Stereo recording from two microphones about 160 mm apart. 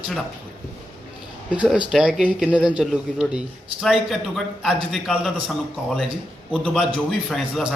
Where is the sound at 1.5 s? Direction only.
5° right (ahead or behind).